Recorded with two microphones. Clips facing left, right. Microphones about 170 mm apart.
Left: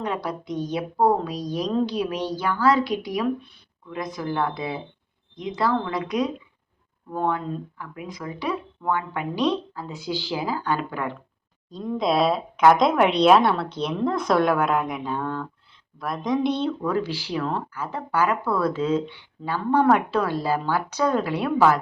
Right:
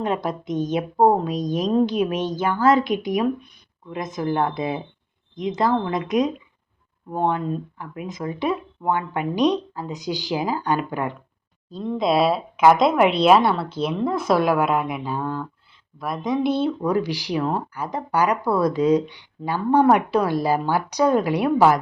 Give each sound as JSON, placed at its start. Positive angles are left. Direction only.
{"t": 0.0, "sound": "speech", "side_deg": -20}
{"t": 11.7, "sound": "a woman's voice", "side_deg": 0}